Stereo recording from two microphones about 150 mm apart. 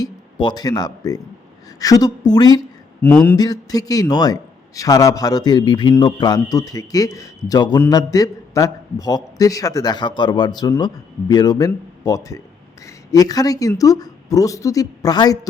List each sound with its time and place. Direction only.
0.0 s a man's voice: 30° left (ahead or behind)
3.0 s speech: 10° left (ahead or behind)
3.3 s a man's voice: 25° left (ahead or behind)